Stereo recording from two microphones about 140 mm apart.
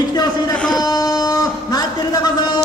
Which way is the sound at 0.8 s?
25° left (ahead or behind).